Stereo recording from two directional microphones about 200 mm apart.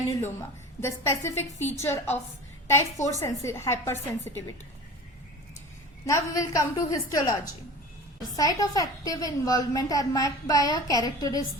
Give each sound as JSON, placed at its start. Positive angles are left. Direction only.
{"t": 0.1, "sound": "a sound", "side_deg": 15}
{"t": 0.8, "sound": "a woman's voice", "side_deg": 15}
{"t": 6.1, "sound": "a woman's voice", "side_deg": 15}
{"t": 8.4, "sound": "a woman's voice", "side_deg": 15}